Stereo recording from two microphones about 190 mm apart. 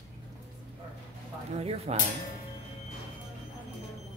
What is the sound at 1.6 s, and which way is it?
Speech, 30° right (ahead or behind).